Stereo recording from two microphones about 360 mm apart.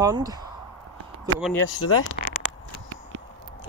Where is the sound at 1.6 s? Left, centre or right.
Left.